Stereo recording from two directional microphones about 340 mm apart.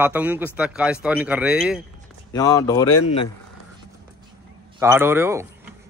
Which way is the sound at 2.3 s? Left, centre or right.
Centre.